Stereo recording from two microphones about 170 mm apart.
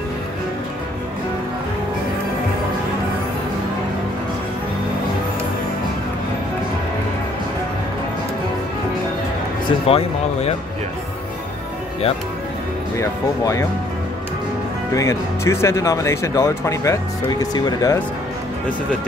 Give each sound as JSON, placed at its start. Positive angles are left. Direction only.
{"t": 9.7, "sound": "speech", "side_deg": 35}
{"t": 12.9, "sound": "speech", "side_deg": 15}
{"t": 15.0, "sound": "speech", "side_deg": 15}